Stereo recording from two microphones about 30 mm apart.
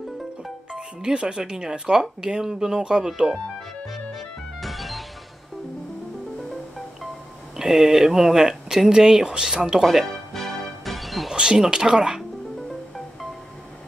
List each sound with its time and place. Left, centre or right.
0.7 s speech: right
3.9 s music: centre
7.5 s speech: centre
9.8 s speech: centre
10.3 s music: centre
11.3 s speech: right